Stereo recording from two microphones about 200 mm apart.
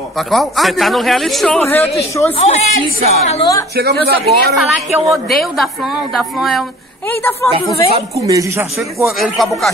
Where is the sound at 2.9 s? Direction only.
40° right (ahead or behind).